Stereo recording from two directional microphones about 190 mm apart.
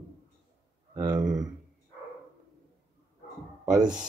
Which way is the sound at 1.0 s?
20° right (ahead or behind).